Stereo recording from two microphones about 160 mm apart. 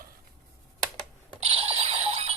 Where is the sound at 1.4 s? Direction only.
35° right (ahead or behind).